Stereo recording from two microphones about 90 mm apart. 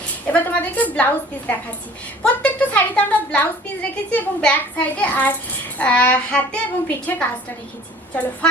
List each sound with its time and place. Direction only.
0.3 s a woman's voice: 20° left (ahead or behind)